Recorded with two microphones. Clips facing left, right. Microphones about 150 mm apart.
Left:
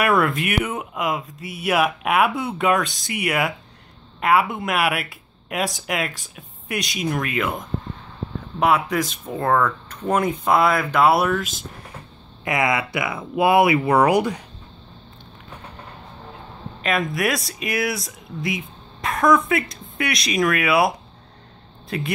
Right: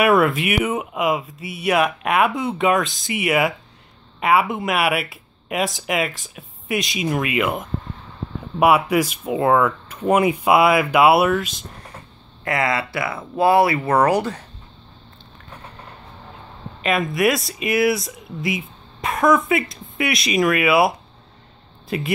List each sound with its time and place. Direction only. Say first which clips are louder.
0.0 s speech: right 3 dB; 5° right (ahead or behind)
12.4 s speech: even; 15° left (ahead or behind)
16.8 s speech: right 3 dB; centre (ahead or behind)